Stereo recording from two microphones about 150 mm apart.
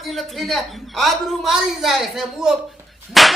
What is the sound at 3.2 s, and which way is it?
Whip, centre (ahead or behind).